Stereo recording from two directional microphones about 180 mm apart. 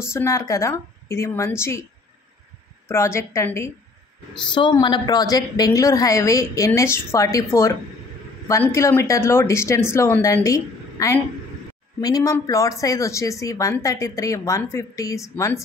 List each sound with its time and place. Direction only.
0.0 s speech: 15° left (ahead or behind)
2.9 s speech: 15° left (ahead or behind)
4.6 s a woman's voice: 25° left (ahead or behind)